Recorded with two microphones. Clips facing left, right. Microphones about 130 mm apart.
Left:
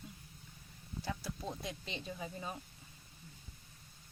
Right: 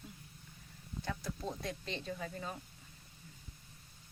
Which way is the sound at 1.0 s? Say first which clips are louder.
Right 1 dB; 5° left (ahead or behind).